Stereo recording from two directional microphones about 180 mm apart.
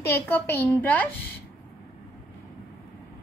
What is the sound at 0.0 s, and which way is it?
A woman's voice, 15° left (ahead or behind).